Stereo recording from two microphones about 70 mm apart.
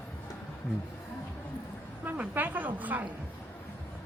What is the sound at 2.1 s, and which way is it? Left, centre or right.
A woman's voice, right.